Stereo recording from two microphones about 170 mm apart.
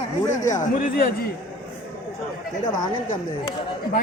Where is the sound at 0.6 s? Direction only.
50° left (ahead or behind).